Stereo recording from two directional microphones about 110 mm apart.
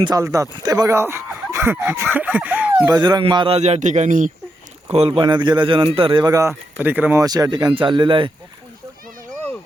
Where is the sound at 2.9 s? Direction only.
40° right (ahead or behind).